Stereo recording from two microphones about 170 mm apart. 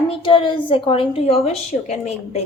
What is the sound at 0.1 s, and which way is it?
A woman's voice, 30° left (ahead or behind).